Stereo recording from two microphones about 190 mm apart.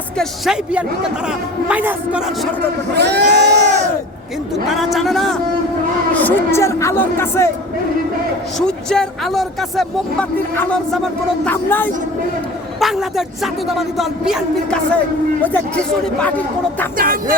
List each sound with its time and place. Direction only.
0.2 s speech: 5° right (ahead or behind)
2.9 s speech: 60° right (ahead or behind)
4.7 s a man's voice: centre (ahead or behind)
8.5 s a man's voice: 5° left (ahead or behind)
12.8 s speech: centre (ahead or behind)
17.0 s music: 50° right (ahead or behind)